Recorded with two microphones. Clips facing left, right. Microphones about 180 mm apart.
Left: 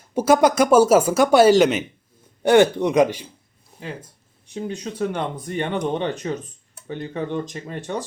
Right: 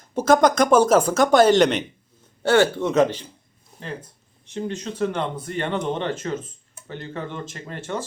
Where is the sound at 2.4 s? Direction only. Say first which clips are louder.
Left 3 dB; 15° left (ahead or behind).